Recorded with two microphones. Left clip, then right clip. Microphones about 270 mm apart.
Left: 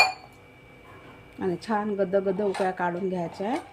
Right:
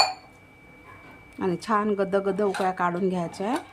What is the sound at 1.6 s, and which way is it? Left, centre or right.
A woman's voice, centre.